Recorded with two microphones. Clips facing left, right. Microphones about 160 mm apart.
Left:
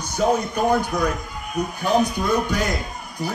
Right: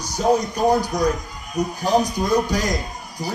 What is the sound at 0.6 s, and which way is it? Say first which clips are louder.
Speech: right 2 dB; 40° right (ahead or behind).